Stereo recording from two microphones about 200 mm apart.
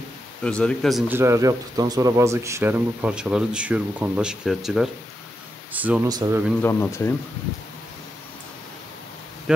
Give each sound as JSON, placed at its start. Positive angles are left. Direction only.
{"t": 0.4, "sound": "speech", "side_deg": 5}
{"t": 1.1, "sound": "a man's voice", "side_deg": -15}
{"t": 6.0, "sound": "speech", "side_deg": -20}
{"t": 6.6, "sound": "speech", "side_deg": 10}